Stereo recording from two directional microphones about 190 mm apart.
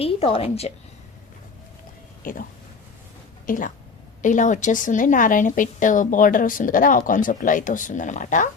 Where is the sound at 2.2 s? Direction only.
45° left (ahead or behind).